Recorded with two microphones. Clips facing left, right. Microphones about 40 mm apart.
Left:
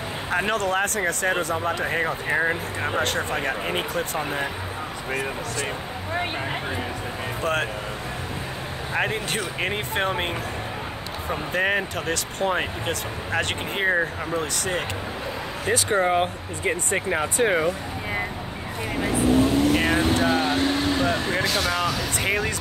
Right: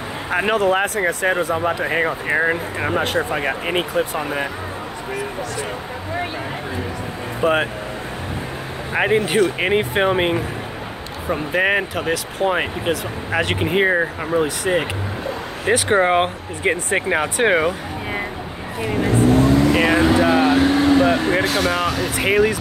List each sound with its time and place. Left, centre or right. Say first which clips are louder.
0.3 s speech: right 6 dB; centre
4.2 s speech: right 4 dB; right
7.4 s speech: right 8 dB; right
8.9 s speech: right 9 dB; right
11.9 s speech: right 5 dB; centre
15.6 s speech: right 6 dB; right
19.1 s vehicle: right 4 dB; right
20.2 s speech: right 6 dB; right
21.0 s speech: right 6 dB; right